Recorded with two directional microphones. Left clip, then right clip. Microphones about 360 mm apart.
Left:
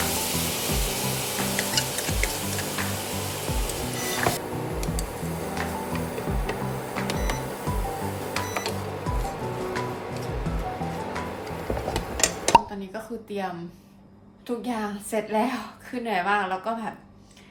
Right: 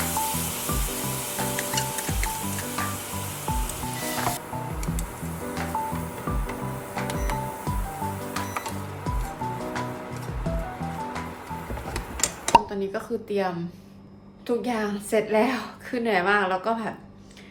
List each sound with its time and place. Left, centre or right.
0.0 s music: centre
4.0 s music: centre
7.1 s music: centre
12.5 s chopping: centre
14.4 s a woman's voice: centre